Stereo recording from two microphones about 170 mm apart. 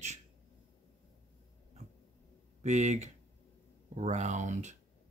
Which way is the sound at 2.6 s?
45° right (ahead or behind).